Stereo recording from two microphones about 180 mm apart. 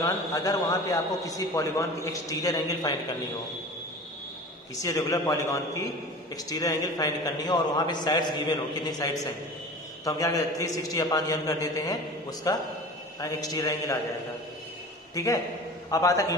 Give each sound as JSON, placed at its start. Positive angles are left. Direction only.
{"t": 0.0, "sound": "a man's voice", "side_deg": 20}
{"t": 4.8, "sound": "a man's voice", "side_deg": 20}
{"t": 15.1, "sound": "a man's voice", "side_deg": 20}